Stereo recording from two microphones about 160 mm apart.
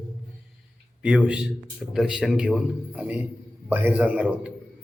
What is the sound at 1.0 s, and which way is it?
Speech, 5° right (ahead or behind).